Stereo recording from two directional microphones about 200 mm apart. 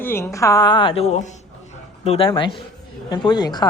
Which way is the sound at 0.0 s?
10° left (ahead or behind).